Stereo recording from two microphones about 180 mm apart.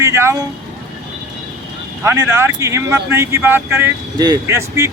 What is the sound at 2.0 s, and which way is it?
Speech, 15° right (ahead or behind).